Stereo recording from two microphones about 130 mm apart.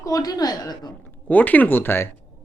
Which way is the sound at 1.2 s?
10° left (ahead or behind).